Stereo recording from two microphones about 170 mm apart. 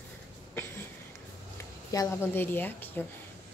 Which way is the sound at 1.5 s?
20° left (ahead or behind).